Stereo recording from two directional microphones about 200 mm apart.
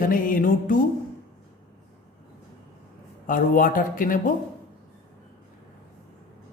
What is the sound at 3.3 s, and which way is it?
Speech, 45° left (ahead or behind).